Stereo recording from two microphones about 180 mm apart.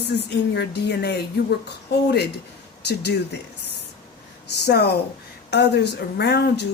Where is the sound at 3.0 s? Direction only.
65° left (ahead or behind).